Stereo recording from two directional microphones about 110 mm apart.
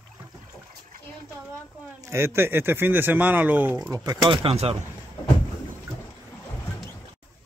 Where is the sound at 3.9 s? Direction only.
35° right (ahead or behind).